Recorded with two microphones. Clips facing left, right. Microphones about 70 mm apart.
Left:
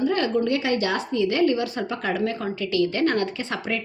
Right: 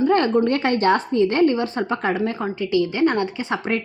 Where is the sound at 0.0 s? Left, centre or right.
Right.